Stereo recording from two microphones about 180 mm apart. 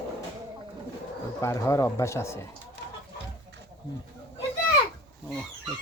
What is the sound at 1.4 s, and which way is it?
Speech, 15° left (ahead or behind).